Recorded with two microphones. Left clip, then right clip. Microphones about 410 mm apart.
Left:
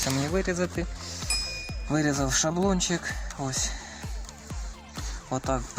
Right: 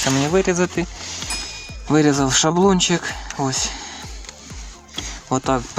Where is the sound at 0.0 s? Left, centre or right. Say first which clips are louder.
Right 10 dB; right.